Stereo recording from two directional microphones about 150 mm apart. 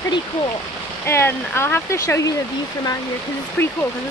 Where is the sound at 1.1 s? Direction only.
15° left (ahead or behind).